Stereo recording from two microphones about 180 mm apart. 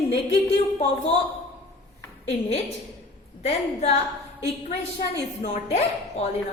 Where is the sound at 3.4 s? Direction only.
35° left (ahead or behind).